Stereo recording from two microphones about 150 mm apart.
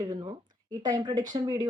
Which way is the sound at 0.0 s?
30° right (ahead or behind).